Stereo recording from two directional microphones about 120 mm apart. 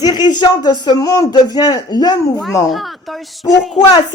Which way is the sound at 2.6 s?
Centre (ahead or behind).